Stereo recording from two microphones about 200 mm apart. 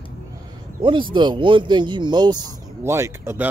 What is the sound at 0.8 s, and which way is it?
Speech, 25° right (ahead or behind).